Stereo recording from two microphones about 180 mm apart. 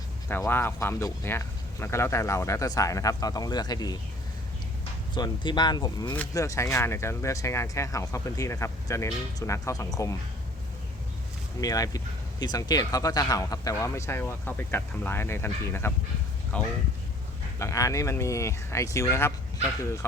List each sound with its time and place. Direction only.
0.3 s speech: 10° left (ahead or behind)
5.1 s speech: 25° left (ahead or behind)
11.6 s speech: 20° left (ahead or behind)
17.6 s speech: 15° left (ahead or behind)